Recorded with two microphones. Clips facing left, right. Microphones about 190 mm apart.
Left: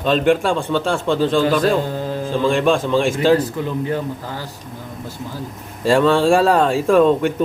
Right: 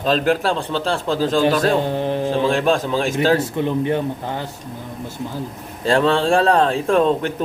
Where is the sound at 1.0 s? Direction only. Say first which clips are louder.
Left 2 dB; 40° right (ahead or behind).